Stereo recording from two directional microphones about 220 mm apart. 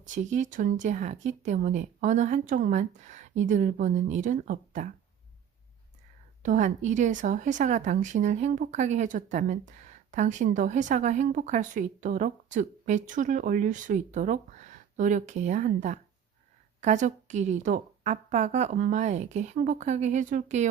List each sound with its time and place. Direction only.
0.0 s speech: 35° right (ahead or behind)
6.4 s speech: 35° right (ahead or behind)